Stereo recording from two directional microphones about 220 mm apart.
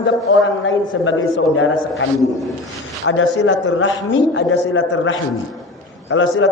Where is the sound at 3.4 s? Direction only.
55° left (ahead or behind).